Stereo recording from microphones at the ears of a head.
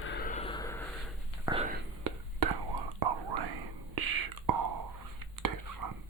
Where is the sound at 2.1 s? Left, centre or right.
Right.